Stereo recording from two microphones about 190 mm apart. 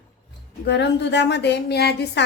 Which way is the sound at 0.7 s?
65° left (ahead or behind).